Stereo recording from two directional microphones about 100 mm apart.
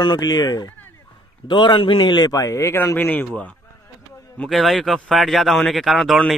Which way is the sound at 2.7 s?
25° left (ahead or behind).